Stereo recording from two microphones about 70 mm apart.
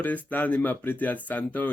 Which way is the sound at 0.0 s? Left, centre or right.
Left.